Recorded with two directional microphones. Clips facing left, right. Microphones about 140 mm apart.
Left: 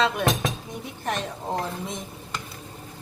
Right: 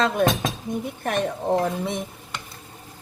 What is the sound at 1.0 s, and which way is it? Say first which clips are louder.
Speech: right 4 dB; 55° right (ahead or behind).